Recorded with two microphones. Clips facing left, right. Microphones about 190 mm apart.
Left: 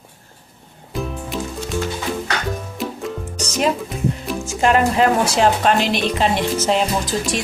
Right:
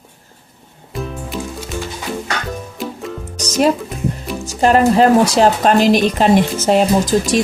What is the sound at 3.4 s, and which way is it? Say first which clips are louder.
Music: right 5 dB; 40° right (ahead or behind).